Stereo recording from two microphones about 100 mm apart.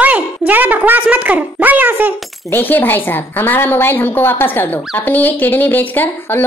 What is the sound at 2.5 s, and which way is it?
A woman's voice, 20° left (ahead or behind).